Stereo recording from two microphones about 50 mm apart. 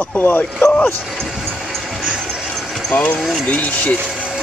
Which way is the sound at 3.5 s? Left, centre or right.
Left.